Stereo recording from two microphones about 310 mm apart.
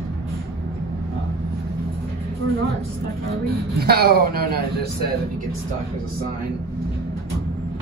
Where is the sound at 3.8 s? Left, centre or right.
Right.